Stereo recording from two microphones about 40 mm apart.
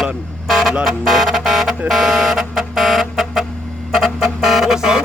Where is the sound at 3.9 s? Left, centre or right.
Centre.